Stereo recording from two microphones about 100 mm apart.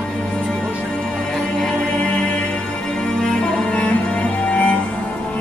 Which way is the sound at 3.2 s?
10° left (ahead or behind).